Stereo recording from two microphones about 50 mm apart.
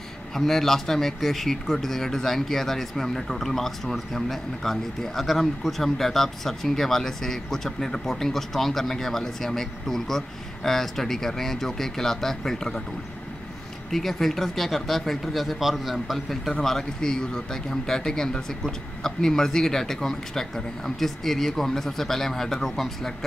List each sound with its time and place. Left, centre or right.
0.3 s a man's voice: centre
13.8 s speech: centre
16.6 s a man's voice: centre